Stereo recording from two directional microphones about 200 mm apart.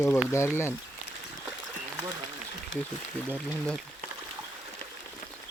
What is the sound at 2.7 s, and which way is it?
Speech, 70° left (ahead or behind).